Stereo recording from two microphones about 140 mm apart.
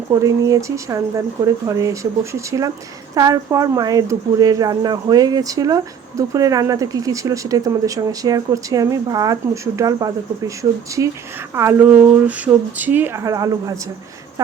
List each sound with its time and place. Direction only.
0.1 s speech: 25° right (ahead or behind)